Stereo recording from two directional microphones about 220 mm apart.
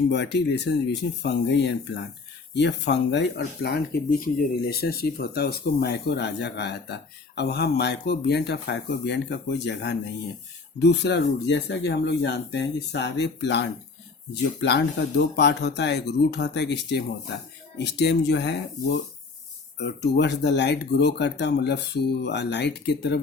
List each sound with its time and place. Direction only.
0.1 s speech: 50° left (ahead or behind)